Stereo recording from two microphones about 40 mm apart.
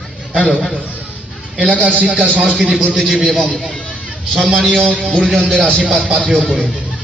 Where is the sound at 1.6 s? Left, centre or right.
Right.